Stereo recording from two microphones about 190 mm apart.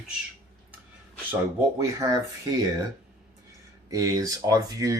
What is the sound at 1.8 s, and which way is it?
Speech, 15° right (ahead or behind).